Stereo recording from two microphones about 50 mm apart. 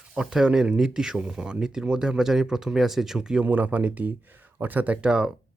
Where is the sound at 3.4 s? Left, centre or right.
Right.